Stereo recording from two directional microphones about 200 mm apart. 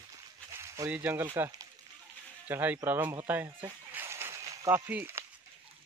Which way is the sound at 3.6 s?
10° right (ahead or behind).